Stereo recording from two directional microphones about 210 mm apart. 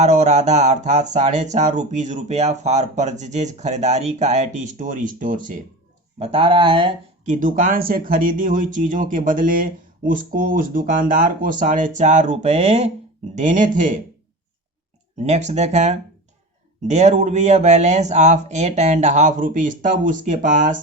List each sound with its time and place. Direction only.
0.0 s speech: 35° right (ahead or behind)
6.1 s speech: 30° right (ahead or behind)
7.3 s speech: 40° right (ahead or behind)
15.2 s speech: 30° right (ahead or behind)